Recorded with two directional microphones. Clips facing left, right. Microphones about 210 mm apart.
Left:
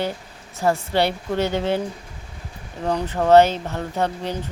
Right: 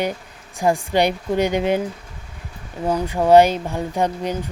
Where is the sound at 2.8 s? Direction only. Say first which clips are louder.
Right 2 dB; 10° right (ahead or behind).